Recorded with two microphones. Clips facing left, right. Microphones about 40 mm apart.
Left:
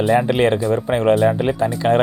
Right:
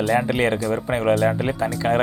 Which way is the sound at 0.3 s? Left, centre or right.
Left.